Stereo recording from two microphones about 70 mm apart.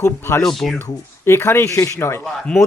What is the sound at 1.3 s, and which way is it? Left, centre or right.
Speech, left.